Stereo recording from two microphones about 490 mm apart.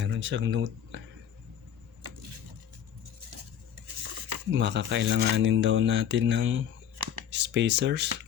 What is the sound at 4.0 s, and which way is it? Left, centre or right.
Stir, right.